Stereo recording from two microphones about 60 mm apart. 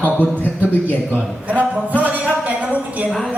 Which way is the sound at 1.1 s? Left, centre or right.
Right.